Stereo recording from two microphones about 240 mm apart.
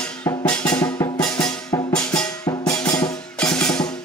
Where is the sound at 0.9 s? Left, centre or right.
Centre.